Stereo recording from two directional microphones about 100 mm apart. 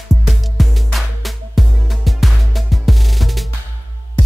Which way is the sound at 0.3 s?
Centre (ahead or behind).